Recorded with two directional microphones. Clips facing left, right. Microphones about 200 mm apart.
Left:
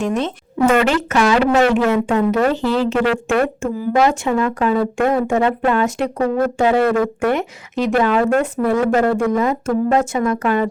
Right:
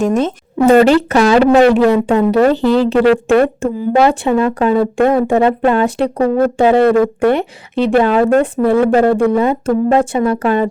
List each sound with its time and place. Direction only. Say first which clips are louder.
0.0 s speech: right 6 dB; 45° right (ahead or behind)
0.7 s speech: right 10 dB; 35° right (ahead or behind)